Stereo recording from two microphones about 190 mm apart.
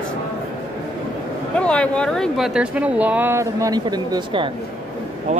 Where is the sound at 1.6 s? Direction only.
5° left (ahead or behind); by 4.5 s 25° right (ahead or behind).